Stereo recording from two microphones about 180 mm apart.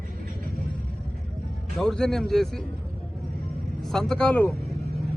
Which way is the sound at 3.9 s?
5° left (ahead or behind).